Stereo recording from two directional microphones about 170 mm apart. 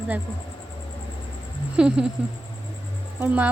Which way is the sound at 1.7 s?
5° right (ahead or behind).